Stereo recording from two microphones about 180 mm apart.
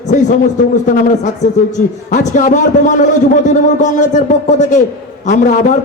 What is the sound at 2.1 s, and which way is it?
A man's voice, 40° left (ahead or behind).